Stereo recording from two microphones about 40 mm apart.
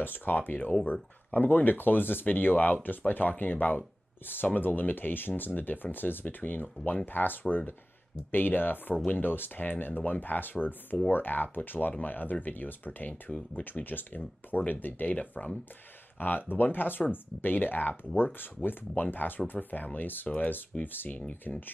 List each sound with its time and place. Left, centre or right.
0.0 s speech: left
13.3 s speech: left
13.7 s speech: left
16.2 s speech: left